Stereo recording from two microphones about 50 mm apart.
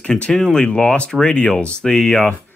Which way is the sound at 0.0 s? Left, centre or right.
Centre.